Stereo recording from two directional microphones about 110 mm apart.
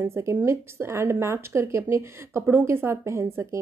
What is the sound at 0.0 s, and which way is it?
A woman's voice, 25° right (ahead or behind).